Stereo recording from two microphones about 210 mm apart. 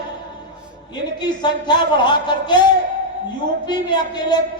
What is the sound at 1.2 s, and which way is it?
Speech, 20° left (ahead or behind).